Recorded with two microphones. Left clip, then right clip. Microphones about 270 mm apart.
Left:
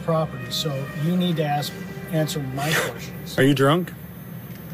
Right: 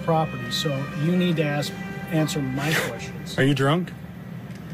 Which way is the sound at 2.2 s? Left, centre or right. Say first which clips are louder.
Even; centre.